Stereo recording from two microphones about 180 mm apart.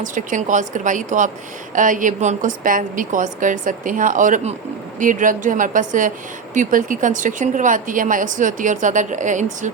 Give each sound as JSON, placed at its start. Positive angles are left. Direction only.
{"t": 0.0, "sound": "a woman's voice", "side_deg": -45}